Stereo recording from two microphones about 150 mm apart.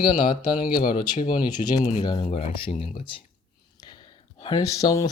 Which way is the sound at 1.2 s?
65° left (ahead or behind).